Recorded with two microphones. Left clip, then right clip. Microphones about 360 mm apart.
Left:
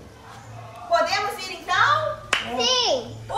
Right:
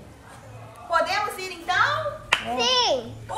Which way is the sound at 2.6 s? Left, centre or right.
Right.